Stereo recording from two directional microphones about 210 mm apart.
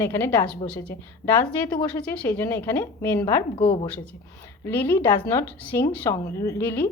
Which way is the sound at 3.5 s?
25° left (ahead or behind).